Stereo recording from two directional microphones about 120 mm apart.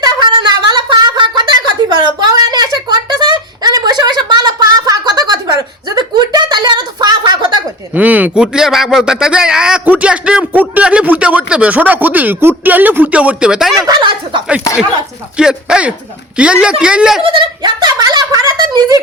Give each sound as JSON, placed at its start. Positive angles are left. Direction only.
{"t": 0.0, "sound": "a sound", "side_deg": -40}
{"t": 7.9, "sound": "speech", "side_deg": -15}
{"t": 13.8, "sound": "speech", "side_deg": -35}
{"t": 15.4, "sound": "speech", "side_deg": -5}
{"t": 17.2, "sound": "speech", "side_deg": -40}